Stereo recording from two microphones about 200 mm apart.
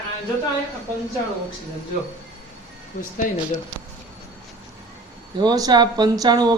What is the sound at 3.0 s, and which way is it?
Speech, 45° left (ahead or behind).